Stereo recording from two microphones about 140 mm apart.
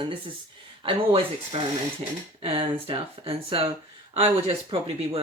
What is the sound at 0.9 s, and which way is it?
Speech, 45° right (ahead or behind).